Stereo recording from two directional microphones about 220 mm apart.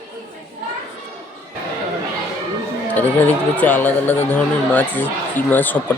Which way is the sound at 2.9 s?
10° left (ahead or behind).